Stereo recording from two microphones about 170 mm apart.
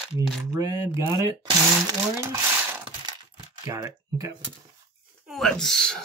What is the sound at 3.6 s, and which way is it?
Speech, 20° right (ahead or behind).